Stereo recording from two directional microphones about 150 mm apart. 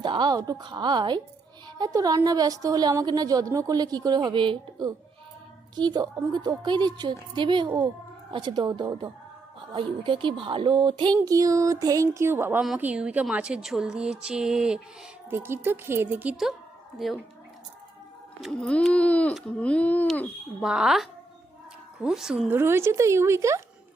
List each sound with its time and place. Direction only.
0.0 s a woman's voice: 30° right (ahead or behind); by 14.8 s 5° right (ahead or behind)
15.3 s speech: 15° right (ahead or behind)
18.3 s speech: 5° left (ahead or behind)
22.4 s speech: 15° right (ahead or behind)